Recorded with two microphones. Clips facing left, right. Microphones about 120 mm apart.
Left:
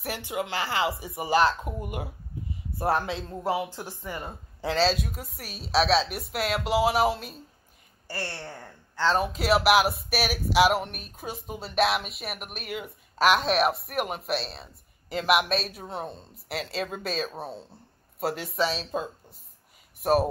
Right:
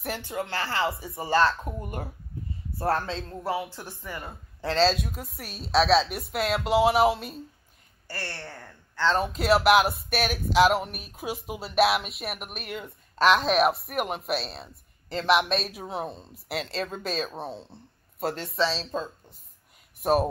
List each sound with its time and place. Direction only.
0.2 s speech: 15° left (ahead or behind)
4.6 s speech: 5° left (ahead or behind)
8.1 s a woman's voice: 25° left (ahead or behind)
9.2 s speech: centre (ahead or behind)